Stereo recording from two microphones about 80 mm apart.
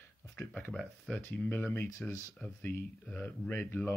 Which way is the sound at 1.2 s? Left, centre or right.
Left.